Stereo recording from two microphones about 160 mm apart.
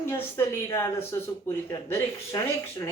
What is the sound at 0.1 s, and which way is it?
Speech, 15° left (ahead or behind).